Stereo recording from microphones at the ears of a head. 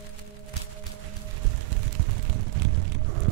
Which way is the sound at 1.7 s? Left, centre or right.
Right.